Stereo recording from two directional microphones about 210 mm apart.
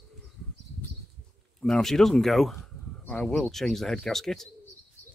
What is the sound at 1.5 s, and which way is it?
Speech, centre (ahead or behind).